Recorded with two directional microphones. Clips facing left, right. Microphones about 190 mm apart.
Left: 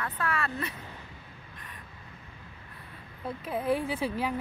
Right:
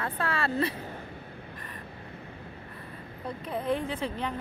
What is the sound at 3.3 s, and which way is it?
Speech, 5° left (ahead or behind).